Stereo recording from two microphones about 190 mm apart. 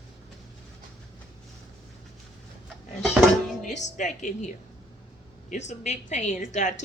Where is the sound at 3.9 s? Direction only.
40° left (ahead or behind).